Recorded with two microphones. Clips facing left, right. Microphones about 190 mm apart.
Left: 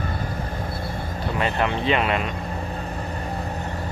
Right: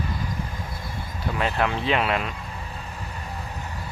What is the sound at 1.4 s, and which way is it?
Speech, centre (ahead or behind).